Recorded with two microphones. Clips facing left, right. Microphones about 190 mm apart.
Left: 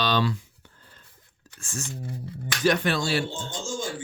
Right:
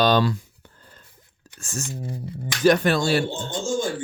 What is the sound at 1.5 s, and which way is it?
A man's voice, 40° right (ahead or behind).